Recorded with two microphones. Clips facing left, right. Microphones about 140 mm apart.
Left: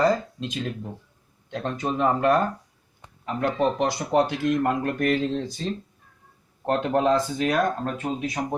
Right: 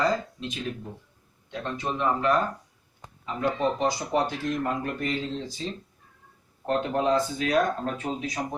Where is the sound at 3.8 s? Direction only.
70° left (ahead or behind).